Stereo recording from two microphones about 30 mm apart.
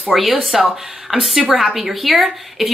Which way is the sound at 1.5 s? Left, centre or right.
Centre.